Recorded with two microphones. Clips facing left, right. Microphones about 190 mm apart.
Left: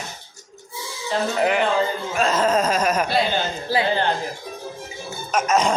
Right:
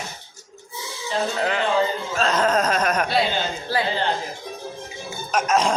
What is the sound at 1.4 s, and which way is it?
Speech, 15° left (ahead or behind).